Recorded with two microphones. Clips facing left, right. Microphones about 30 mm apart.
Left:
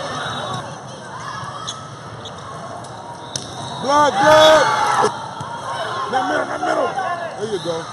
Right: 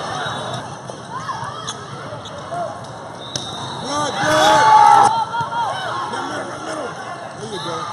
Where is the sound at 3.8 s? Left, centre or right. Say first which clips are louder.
Left 7 dB; centre.